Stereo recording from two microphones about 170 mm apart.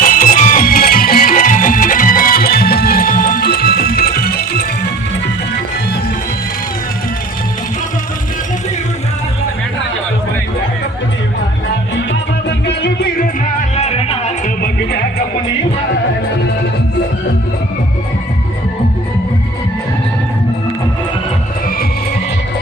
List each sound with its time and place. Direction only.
0.0 s music: 55° left (ahead or behind)
12.5 s music: 85° left
13.4 s music: 40° left (ahead or behind)